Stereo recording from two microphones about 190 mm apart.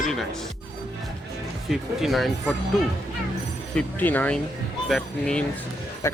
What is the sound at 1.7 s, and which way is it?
Speech, centre (ahead or behind).